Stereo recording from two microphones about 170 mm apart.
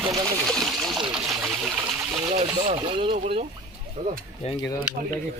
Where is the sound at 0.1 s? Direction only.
Centre (ahead or behind).